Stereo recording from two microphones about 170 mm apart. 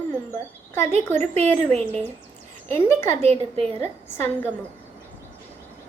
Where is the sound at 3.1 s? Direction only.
40° right (ahead or behind).